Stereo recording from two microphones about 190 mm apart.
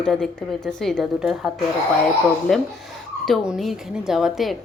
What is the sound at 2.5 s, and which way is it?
A woman's voice, centre (ahead or behind).